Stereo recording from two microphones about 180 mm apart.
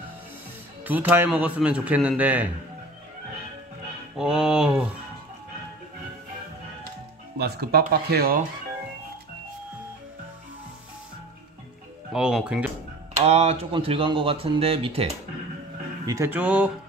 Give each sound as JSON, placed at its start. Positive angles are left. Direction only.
{"t": 0.8, "sound": "speech", "side_deg": -10}
{"t": 4.2, "sound": "a sound", "side_deg": -5}
{"t": 7.3, "sound": "speech", "side_deg": -65}
{"t": 12.1, "sound": "a sound", "side_deg": -5}
{"t": 13.2, "sound": "speech", "side_deg": -35}
{"t": 16.1, "sound": "speech", "side_deg": -15}